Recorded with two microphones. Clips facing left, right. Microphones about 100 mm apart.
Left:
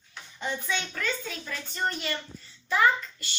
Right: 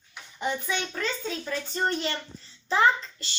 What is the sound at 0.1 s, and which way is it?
Child singing, 15° right (ahead or behind).